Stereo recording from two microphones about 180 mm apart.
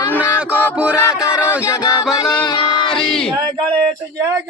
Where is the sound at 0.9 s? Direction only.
15° left (ahead or behind).